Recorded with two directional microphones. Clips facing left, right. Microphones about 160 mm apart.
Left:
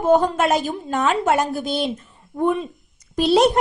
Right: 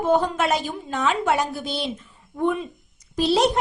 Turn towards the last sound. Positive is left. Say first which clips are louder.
# left 4 dB
turn(degrees=55)  # may be behind; listen again after turning